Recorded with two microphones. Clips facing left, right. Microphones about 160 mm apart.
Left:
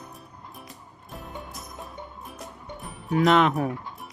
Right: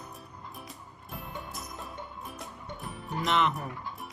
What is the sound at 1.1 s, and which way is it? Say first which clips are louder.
Music: left 2 dB; centre (ahead or behind).